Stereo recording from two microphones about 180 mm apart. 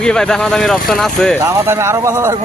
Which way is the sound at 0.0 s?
5° left (ahead or behind).